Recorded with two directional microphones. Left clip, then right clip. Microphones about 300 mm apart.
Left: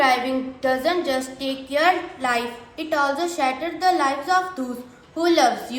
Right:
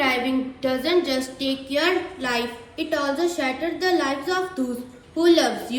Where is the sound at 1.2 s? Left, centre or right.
Centre.